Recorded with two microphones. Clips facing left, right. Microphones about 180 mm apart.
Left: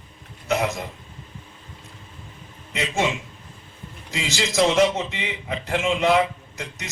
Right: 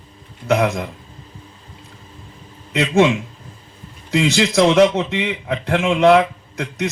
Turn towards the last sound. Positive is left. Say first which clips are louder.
# right 12 dB
turn(degrees=-60)  # may be behind; listen again after turning